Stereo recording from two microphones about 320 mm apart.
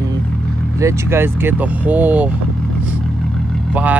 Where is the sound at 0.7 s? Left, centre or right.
Centre.